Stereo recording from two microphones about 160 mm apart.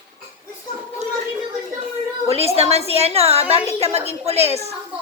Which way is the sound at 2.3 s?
40° right (ahead or behind).